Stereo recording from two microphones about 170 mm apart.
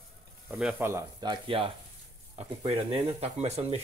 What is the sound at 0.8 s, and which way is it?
Speech, 20° right (ahead or behind).